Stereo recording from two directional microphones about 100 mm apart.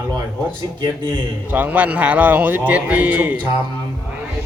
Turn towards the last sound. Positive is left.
turn(degrees=-15)  # may be behind; listen again after turning